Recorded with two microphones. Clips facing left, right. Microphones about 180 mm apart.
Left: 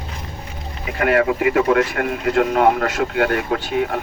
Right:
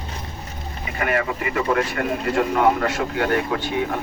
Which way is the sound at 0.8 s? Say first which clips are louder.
Left 6 dB; 70° left (ahead or behind).